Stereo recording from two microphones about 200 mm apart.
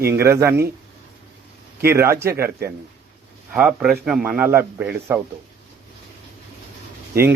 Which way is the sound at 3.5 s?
5° right (ahead or behind).